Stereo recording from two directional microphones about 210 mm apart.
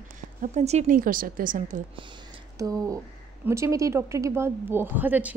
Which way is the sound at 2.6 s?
15° right (ahead or behind).